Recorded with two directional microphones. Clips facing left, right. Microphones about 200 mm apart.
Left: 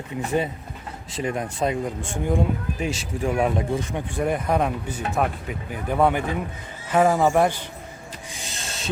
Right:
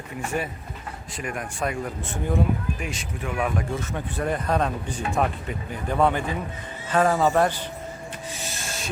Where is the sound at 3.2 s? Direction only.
40° left (ahead or behind).